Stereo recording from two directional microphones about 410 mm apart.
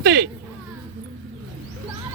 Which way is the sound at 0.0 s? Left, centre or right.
Right.